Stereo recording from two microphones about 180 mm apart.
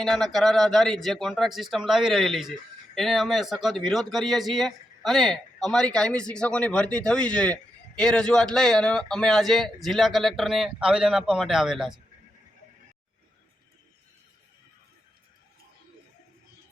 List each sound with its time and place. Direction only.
0.0 s speech: centre (ahead or behind)